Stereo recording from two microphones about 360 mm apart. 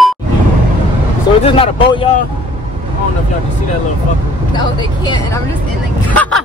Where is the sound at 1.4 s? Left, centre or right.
Centre.